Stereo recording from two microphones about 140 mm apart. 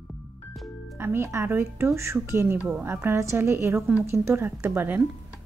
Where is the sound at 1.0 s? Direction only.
20° right (ahead or behind).